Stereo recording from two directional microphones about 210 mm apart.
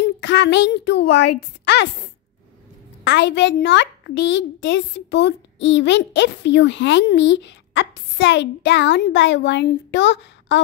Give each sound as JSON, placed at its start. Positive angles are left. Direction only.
{"t": 0.0, "sound": "a woman's voice", "side_deg": 55}
{"t": 3.0, "sound": "a child's voice", "side_deg": 55}